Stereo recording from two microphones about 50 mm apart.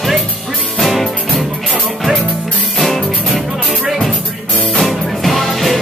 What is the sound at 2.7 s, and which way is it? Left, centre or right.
Music, centre.